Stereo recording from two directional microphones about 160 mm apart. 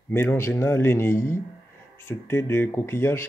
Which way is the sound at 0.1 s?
15° left (ahead or behind).